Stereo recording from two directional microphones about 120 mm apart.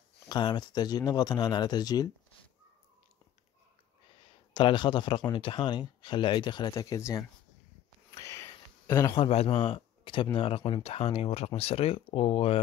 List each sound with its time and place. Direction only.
0.3 s speech: 40° left (ahead or behind)
4.6 s speech: 45° left (ahead or behind); by 7.2 s 30° left (ahead or behind)
8.1 s a sound: 25° left (ahead or behind)
9.1 s speech: 55° left (ahead or behind)